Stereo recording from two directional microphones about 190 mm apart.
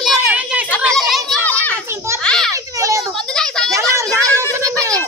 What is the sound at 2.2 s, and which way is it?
Children playing, 5° left (ahead or behind).